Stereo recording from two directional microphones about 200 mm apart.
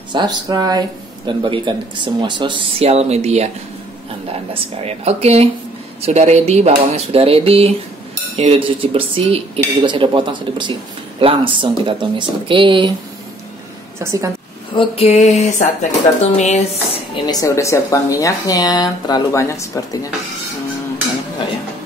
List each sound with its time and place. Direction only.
0.1 s speech: 20° right (ahead or behind)
4.8 s speech: 30° right (ahead or behind)
13.9 s speech: 15° right (ahead or behind)
14.8 s speech: 30° left (ahead or behind)
17.1 s speech: 20° left (ahead or behind)